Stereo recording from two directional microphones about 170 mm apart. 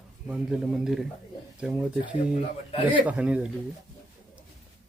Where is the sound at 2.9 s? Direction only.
10° right (ahead or behind).